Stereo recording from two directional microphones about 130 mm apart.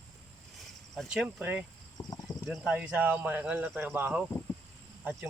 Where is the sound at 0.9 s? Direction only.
5° right (ahead or behind).